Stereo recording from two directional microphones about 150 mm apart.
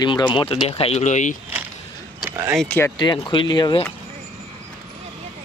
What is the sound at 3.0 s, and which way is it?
Speech, 30° left (ahead or behind).